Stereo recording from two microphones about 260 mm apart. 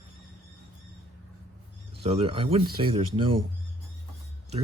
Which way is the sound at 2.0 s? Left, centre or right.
Right.